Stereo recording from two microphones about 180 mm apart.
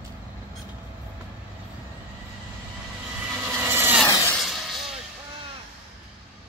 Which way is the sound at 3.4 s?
15° right (ahead or behind).